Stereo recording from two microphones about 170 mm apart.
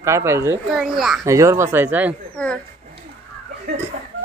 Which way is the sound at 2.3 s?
5° left (ahead or behind).